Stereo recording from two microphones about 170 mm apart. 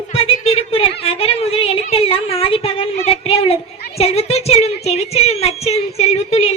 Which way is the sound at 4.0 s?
35° left (ahead or behind).